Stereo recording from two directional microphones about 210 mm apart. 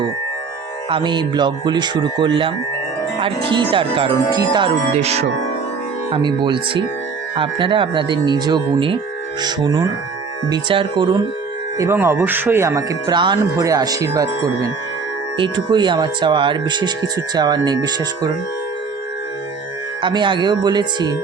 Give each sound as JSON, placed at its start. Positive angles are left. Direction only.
{"t": 0.9, "sound": "speech", "side_deg": -25}
{"t": 4.9, "sound": "speech", "side_deg": -30}
{"t": 11.8, "sound": "speech", "side_deg": -10}
{"t": 20.0, "sound": "speech", "side_deg": -20}